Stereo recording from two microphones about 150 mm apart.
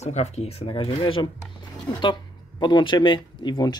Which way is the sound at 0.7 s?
35° left (ahead or behind).